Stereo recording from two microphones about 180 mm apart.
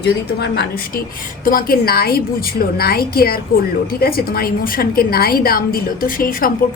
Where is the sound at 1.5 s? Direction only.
55° left (ahead or behind).